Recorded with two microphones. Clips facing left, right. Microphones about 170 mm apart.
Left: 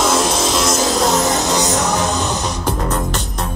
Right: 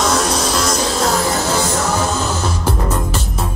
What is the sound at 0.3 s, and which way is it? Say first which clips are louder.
Music: left 1 dB; 25° left (ahead or behind).